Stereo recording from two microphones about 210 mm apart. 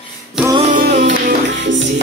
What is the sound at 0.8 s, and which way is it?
Music, 40° right (ahead or behind).